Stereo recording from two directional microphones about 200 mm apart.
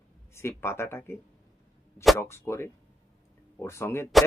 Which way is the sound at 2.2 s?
15° left (ahead or behind).